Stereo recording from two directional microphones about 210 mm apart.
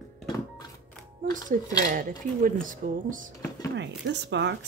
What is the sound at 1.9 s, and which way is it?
Speech, 40° right (ahead or behind).